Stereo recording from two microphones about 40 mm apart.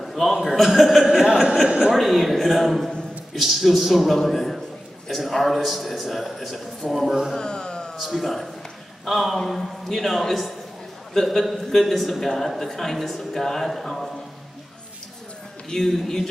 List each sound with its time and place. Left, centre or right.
0.0 s a sound: centre
0.5 s a man's voice: centre
1.0 s a sound: centre
2.0 s a man's voice: centre
7.3 s music: left
8.0 s a man's voice: centre
15.7 s a man's voice: centre